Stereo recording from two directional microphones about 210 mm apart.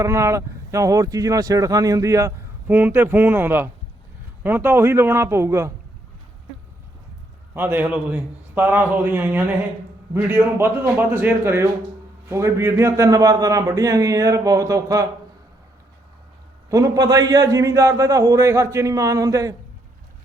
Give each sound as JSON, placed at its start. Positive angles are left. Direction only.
{"t": 0.0, "sound": "speech", "side_deg": -15}
{"t": 7.5, "sound": "speech", "side_deg": -10}
{"t": 16.6, "sound": "speech", "side_deg": -15}